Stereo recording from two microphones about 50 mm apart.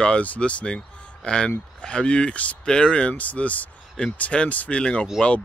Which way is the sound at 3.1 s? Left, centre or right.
Left.